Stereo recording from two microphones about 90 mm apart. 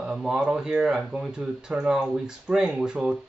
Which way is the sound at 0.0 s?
5° right (ahead or behind).